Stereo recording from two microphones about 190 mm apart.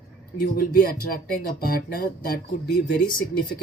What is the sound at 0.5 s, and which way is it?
Speech, 50° left (ahead or behind).